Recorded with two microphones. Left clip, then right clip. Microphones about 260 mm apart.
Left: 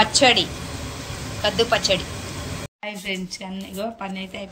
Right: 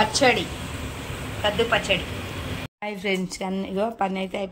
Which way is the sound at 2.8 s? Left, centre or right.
Centre.